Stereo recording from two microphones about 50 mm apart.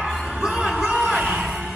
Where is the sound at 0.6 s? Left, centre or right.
Right.